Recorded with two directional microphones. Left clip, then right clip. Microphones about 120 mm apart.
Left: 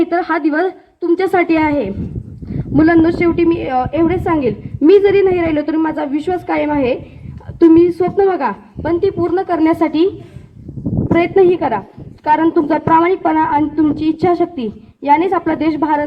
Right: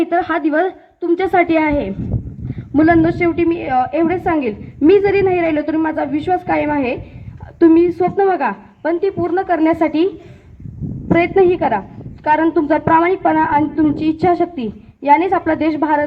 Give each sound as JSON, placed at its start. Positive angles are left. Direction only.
{"t": 0.0, "sound": "a woman's voice", "side_deg": -55}
{"t": 11.1, "sound": "a woman's voice", "side_deg": -30}